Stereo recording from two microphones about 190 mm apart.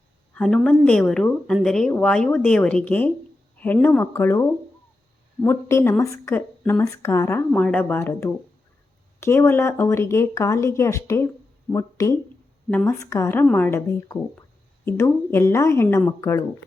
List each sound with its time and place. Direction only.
0.3 s speech: 5° left (ahead or behind)